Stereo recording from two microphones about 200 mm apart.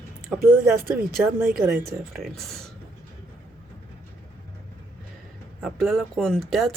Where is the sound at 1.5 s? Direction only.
5° right (ahead or behind).